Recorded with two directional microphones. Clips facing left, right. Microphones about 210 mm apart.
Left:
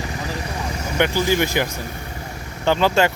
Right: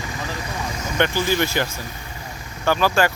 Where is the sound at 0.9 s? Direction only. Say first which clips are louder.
Left 2 dB; 15° left (ahead or behind).